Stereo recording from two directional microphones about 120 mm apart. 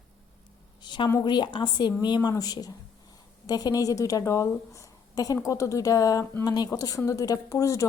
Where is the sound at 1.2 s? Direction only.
40° left (ahead or behind).